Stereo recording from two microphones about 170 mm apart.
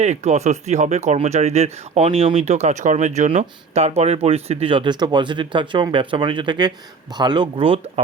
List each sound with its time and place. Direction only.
0.0 s speech: 40° right (ahead or behind)